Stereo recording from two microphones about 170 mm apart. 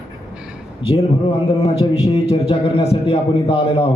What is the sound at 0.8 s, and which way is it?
A man's voice, 35° left (ahead or behind).